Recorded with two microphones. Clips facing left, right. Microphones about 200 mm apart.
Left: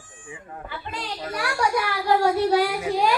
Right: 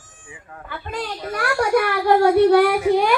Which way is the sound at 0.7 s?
50° right (ahead or behind).